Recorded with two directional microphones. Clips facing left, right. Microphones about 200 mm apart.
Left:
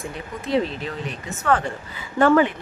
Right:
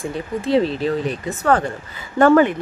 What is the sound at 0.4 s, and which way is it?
Speech, 30° right (ahead or behind).